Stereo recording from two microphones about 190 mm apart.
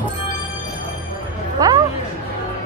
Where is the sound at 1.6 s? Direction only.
20° right (ahead or behind).